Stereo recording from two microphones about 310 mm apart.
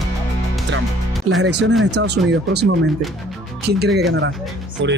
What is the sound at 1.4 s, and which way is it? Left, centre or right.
Speech, right.